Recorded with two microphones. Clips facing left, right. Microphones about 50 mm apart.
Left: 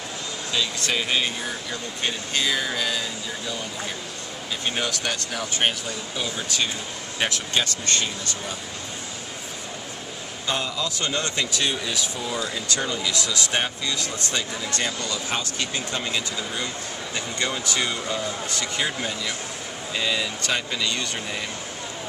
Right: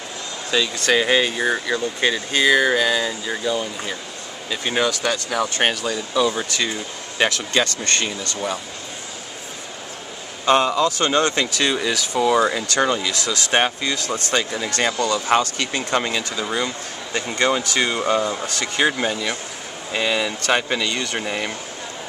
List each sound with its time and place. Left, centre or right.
0.5 s speech: right
5.6 s speech: right
10.4 s speech: right
11.7 s speech: right
15.5 s speech: right
16.6 s speech: right
20.8 s speech: right